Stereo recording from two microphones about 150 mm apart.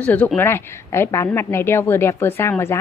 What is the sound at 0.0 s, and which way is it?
A woman's voice, 10° left (ahead or behind).